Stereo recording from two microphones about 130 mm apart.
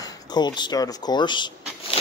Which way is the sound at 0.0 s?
30° left (ahead or behind).